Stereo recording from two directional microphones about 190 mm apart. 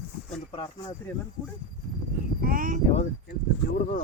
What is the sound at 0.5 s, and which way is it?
Speech, 30° left (ahead or behind).